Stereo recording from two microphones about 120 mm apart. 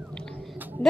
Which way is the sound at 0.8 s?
50° right (ahead or behind).